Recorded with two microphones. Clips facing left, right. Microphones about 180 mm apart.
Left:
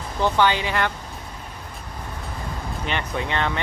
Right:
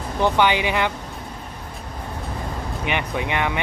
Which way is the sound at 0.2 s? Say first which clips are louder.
Right 1 dB; 15° right (ahead or behind).